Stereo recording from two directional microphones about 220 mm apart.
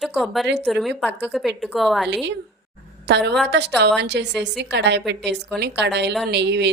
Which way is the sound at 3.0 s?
50° right (ahead or behind).